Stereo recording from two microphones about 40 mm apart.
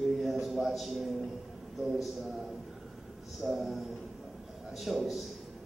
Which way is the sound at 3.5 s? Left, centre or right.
Centre.